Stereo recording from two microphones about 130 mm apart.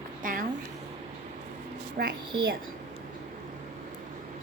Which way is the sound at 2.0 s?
90° right.